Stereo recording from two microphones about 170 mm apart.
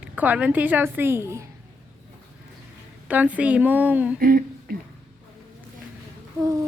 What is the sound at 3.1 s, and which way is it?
A woman's voice, 10° right (ahead or behind).